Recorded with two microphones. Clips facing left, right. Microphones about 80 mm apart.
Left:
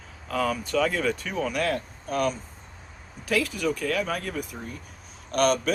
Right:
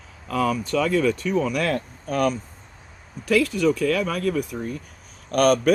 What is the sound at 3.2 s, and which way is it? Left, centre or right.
Speech, right.